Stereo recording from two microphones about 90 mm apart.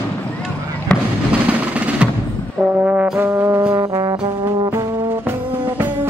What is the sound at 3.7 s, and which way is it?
Brass instrument, 50° right (ahead or behind).